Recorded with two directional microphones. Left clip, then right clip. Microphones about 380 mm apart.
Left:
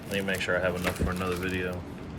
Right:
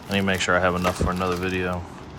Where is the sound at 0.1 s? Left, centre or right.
Centre.